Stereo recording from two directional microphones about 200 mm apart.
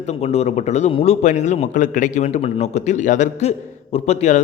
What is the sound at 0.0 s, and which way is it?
A man's voice, 35° left (ahead or behind).